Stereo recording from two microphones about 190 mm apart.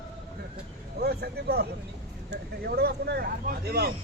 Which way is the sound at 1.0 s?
55° right (ahead or behind).